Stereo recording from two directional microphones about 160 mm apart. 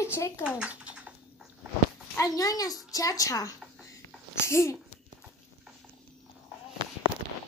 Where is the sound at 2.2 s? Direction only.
20° left (ahead or behind).